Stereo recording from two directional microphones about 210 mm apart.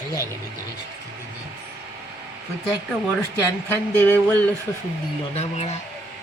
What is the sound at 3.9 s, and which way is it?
Speech, 10° left (ahead or behind).